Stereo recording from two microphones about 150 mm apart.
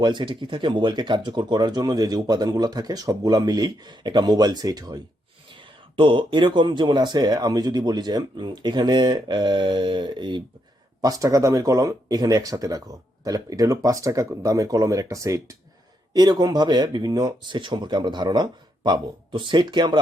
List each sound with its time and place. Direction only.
0.0 s speech: 30° right (ahead or behind)